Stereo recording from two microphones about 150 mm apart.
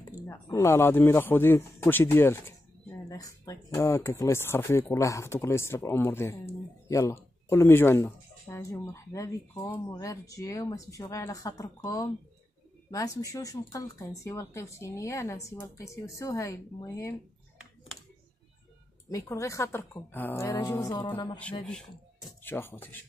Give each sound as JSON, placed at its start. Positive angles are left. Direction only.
{"t": 0.3, "sound": "speech", "side_deg": 20}
{"t": 19.0, "sound": "speech", "side_deg": 20}
{"t": 21.4, "sound": "speech", "side_deg": 5}